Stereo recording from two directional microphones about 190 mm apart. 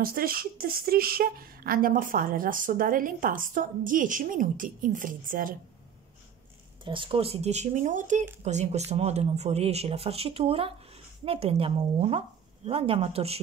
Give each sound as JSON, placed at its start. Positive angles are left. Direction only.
{"t": 0.0, "sound": "speech", "side_deg": -50}
{"t": 6.8, "sound": "speech", "side_deg": -25}